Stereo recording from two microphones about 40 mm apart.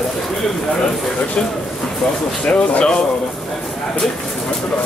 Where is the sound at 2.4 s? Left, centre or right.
Left.